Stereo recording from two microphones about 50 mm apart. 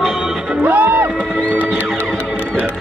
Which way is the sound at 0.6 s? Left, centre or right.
Right.